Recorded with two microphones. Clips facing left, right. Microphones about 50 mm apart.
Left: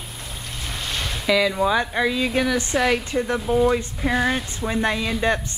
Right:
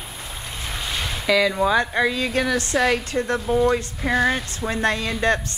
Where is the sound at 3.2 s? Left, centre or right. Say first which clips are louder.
Even; centre.